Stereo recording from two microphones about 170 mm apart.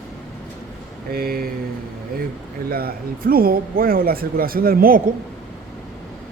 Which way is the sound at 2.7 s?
65° right (ahead or behind).